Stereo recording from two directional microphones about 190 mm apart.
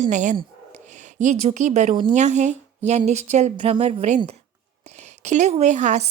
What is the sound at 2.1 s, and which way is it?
A woman's voice, 40° right (ahead or behind).